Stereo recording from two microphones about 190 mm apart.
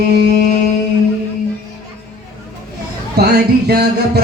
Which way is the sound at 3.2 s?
55° right (ahead or behind).